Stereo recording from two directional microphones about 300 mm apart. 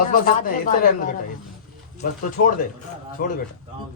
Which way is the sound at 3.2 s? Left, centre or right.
Left.